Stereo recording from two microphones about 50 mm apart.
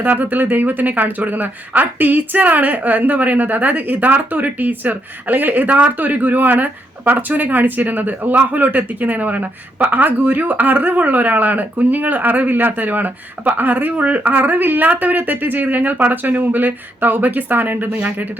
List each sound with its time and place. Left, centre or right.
0.0 s a woman's voice: right